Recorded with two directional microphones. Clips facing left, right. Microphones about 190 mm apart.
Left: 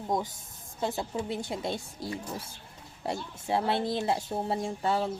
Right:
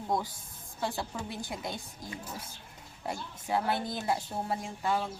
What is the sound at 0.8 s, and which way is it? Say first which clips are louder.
Speech: left 4 dB; 20° left (ahead or behind).